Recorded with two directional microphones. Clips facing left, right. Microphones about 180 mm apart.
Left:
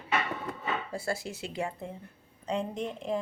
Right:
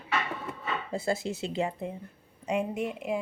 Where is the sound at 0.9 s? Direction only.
20° right (ahead or behind).